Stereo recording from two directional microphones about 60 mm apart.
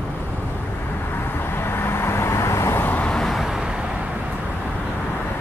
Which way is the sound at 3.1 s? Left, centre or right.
Centre.